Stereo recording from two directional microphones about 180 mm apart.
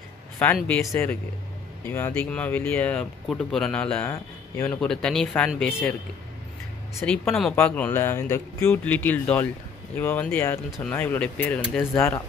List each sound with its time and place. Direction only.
0.6 s speech: 5° left (ahead or behind)
4.7 s speech: 5° left (ahead or behind)
7.0 s speech: 5° left (ahead or behind)